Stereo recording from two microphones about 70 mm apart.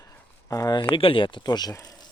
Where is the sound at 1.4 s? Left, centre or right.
Left.